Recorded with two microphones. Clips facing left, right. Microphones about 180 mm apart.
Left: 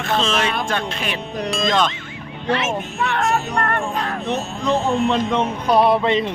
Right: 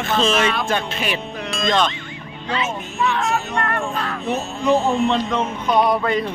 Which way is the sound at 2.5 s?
65° left (ahead or behind).